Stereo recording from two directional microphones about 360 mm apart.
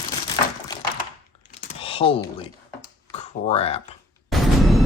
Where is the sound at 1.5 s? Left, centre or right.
Centre.